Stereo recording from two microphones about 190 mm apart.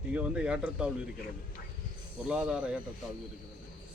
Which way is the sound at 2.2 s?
5° right (ahead or behind).